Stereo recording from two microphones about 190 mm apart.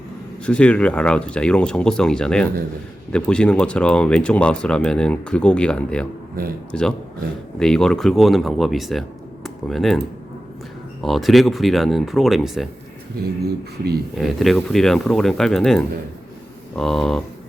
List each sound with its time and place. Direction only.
0.4 s speech: 5° left (ahead or behind)
11.0 s speech: centre (ahead or behind)
13.4 s speech: 55° right (ahead or behind)
14.2 s speech: centre (ahead or behind)